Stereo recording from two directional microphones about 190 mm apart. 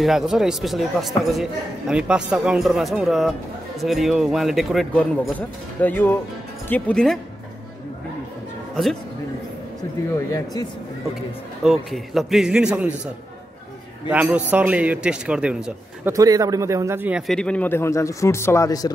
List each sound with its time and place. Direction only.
0.0 s a man's voice: centre (ahead or behind)
10.3 s speech: 20° left (ahead or behind)
11.6 s speech: centre (ahead or behind)
14.1 s speech: 10° right (ahead or behind)
16.1 s speech: 20° right (ahead or behind)
17.3 s a man's voice: 5° left (ahead or behind)